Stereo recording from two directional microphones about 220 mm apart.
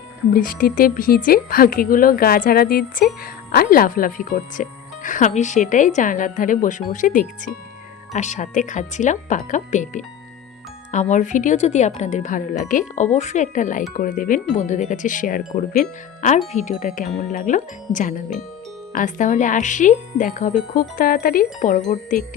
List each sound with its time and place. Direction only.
0.3 s speech: 40° left (ahead or behind)